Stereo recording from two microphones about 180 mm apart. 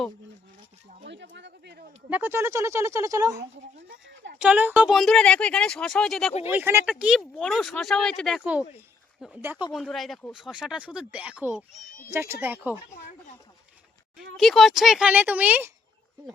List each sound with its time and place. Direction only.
1.0 s a sound: 80° right
2.0 s speech: 10° right (ahead or behind)
6.5 s speech: 10° right (ahead or behind)
9.4 s speech: 10° right (ahead or behind)
9.7 s speech: centre (ahead or behind)
14.2 s speech: centre (ahead or behind)